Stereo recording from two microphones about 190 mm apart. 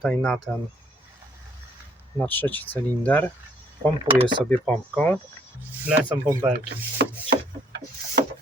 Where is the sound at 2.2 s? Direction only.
10° left (ahead or behind).